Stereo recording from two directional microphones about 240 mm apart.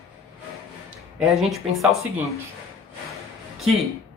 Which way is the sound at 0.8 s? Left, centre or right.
Centre.